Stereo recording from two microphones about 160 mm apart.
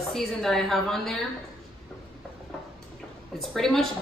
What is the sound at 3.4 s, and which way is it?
Speech, centre (ahead or behind).